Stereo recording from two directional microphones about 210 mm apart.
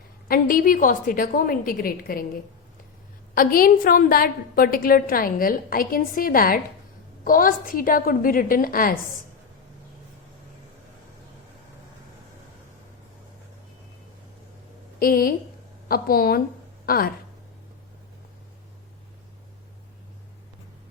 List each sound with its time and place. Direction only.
0.3 s a woman's voice: 45° left (ahead or behind)
3.3 s a woman's voice: 45° left (ahead or behind)
14.9 s a woman's voice: 45° left (ahead or behind)